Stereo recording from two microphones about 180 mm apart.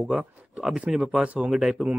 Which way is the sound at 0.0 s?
5° right (ahead or behind).